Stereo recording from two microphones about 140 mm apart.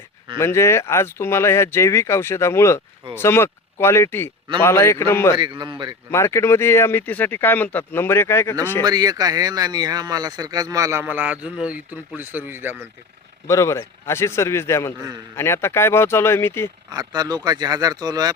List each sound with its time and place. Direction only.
0.3 s speech: 20° left (ahead or behind)
5.4 s a man's voice: 30° right (ahead or behind)
6.1 s speech: 20° left (ahead or behind)
8.8 s speech: 30° right (ahead or behind)
11.0 s a man's voice: 10° right (ahead or behind)
13.5 s speech: 20° left (ahead or behind)
16.9 s speech: 30° right (ahead or behind)